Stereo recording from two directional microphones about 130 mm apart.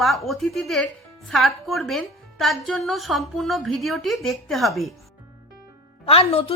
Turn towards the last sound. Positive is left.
turn(degrees=45)  # may be behind; listen again after turning